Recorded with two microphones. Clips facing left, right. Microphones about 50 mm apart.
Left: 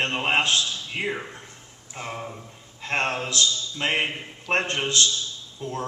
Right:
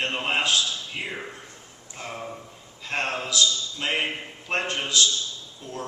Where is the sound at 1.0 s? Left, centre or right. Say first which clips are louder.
Left 4 dB; left.